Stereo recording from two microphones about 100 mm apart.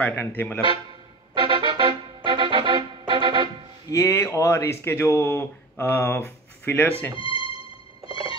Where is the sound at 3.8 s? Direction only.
30° left (ahead or behind).